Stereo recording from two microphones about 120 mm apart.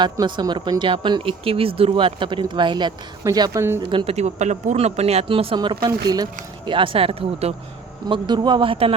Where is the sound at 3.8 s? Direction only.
50° right (ahead or behind).